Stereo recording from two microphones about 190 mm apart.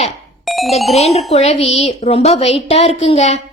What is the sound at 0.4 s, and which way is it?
Music, centre (ahead or behind).